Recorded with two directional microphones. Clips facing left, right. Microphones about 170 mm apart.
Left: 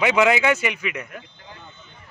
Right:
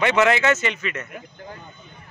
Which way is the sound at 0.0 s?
10° left (ahead or behind).